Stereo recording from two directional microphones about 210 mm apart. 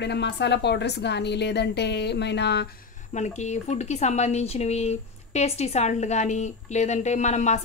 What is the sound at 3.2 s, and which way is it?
A woman's voice, 35° left (ahead or behind).